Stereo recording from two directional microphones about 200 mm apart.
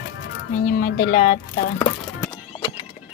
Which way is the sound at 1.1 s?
45° left (ahead or behind).